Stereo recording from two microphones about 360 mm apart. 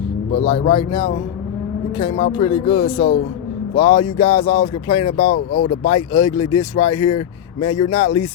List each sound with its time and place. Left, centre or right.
0.5 s speech: centre
5.3 s speech: left
5.9 s speech: centre